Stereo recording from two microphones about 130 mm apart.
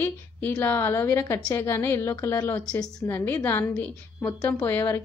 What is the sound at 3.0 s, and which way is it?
A woman's voice, 15° left (ahead or behind).